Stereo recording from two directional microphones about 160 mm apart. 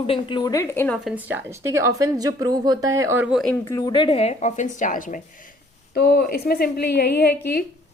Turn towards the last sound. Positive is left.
turn(degrees=80)